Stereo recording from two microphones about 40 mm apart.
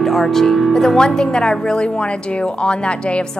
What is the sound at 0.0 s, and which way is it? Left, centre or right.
Speech, centre.